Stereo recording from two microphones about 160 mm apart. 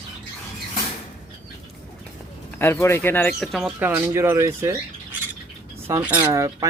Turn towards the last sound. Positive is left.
turn(degrees=-20)  # may be behind; listen again after turning